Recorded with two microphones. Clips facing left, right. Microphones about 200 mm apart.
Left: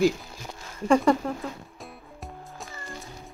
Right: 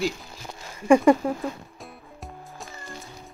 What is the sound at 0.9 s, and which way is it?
Speech, 10° right (ahead or behind).